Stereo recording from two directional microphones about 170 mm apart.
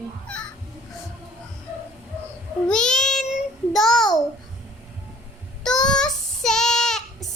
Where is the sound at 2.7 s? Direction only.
5° left (ahead or behind).